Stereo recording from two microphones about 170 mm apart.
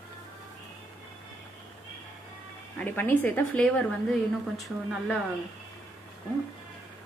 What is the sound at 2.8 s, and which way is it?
A woman's voice, 10° left (ahead or behind).